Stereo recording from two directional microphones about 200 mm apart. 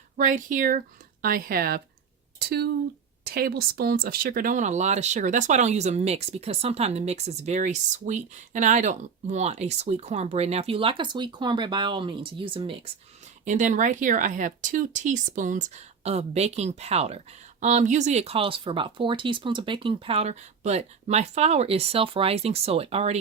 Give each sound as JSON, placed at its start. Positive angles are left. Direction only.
{"t": 0.2, "sound": "speech", "side_deg": -40}
{"t": 13.4, "sound": "speech", "side_deg": -40}